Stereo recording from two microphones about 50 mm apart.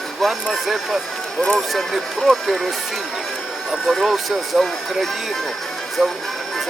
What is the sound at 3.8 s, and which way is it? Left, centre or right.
Speech, centre.